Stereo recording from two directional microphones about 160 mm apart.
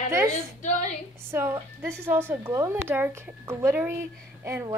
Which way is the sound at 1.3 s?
15° right (ahead or behind).